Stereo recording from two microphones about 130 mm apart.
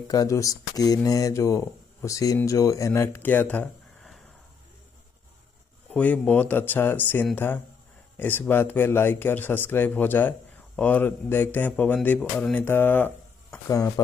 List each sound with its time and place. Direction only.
0.1 s speech: 25° left (ahead or behind); by 4.2 s 5° left (ahead or behind)
5.9 s speech: 10° left (ahead or behind)
13.7 s speech: 30° left (ahead or behind)